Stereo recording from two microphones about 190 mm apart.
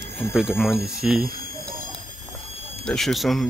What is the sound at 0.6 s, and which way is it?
Speech, centre (ahead or behind).